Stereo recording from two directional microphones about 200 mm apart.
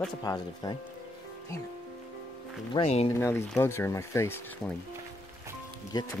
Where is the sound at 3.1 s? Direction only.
15° left (ahead or behind).